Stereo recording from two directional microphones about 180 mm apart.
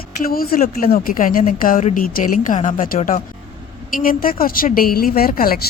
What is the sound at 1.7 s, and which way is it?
Speech, 35° left (ahead or behind).